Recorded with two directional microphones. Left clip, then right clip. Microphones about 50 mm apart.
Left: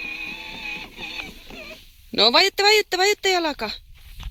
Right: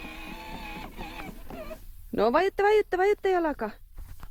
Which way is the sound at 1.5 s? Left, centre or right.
Centre.